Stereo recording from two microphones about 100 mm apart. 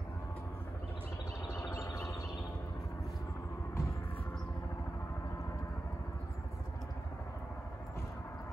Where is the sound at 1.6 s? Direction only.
30° left (ahead or behind).